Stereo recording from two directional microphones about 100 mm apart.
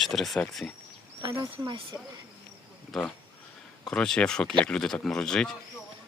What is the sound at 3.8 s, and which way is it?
Speech, 10° left (ahead or behind).